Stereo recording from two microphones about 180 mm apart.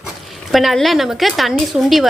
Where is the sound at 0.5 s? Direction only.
Centre (ahead or behind).